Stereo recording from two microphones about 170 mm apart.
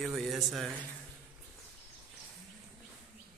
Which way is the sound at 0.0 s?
Centre (ahead or behind).